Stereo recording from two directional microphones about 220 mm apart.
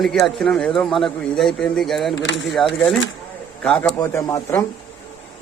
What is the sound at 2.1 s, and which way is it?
Speech, 55° left (ahead or behind).